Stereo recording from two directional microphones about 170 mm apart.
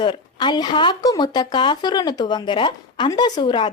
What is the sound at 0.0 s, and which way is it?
Speech, 25° left (ahead or behind).